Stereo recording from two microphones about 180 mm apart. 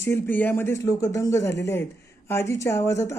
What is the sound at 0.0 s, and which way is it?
Speech, 10° left (ahead or behind).